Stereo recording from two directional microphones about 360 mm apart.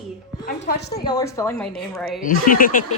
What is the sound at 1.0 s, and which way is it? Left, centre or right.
A woman's voice, centre.